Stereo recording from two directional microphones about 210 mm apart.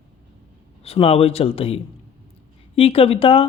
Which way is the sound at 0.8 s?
30° left (ahead or behind).